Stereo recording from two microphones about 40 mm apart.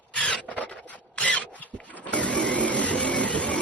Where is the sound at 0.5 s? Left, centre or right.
Left.